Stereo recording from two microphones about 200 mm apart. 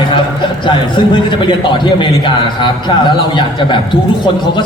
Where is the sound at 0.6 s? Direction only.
25° left (ahead or behind).